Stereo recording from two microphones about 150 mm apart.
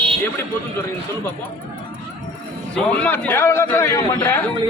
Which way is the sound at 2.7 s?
10° left (ahead or behind).